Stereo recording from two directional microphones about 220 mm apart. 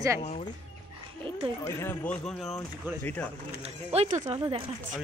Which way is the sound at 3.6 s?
30° right (ahead or behind).